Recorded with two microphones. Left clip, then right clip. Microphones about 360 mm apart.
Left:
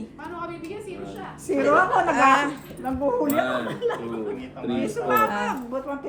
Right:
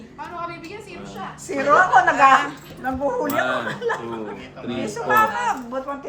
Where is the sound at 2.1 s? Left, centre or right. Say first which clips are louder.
Right 4 dB; centre.